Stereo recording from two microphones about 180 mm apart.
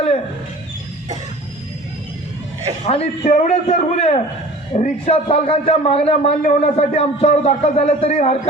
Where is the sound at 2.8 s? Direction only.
35° left (ahead or behind).